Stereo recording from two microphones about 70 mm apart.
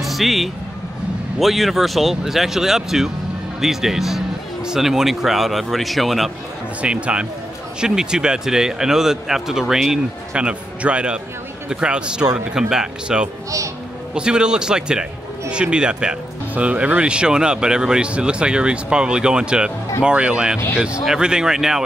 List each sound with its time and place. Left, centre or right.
0.0 s vehicle: centre
1.4 s speech: centre
6.8 s speech: centre
10.3 s speech: centre